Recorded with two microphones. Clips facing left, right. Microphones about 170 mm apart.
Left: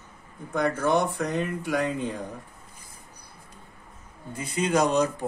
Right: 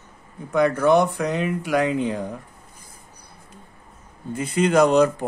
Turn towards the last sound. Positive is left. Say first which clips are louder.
# right 7 dB
turn(degrees=-60)  # may be behind; listen again after turning